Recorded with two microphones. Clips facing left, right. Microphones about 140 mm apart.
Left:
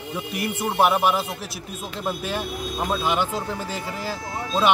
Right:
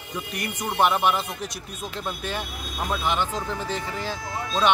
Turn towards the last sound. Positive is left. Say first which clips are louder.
# left 2 dB
turn(degrees=10)  # may be behind; listen again after turning